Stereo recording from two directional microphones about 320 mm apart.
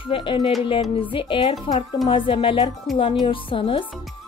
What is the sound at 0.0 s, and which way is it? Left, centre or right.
Speech, centre.